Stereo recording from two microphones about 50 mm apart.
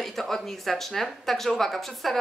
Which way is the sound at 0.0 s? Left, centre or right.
Centre.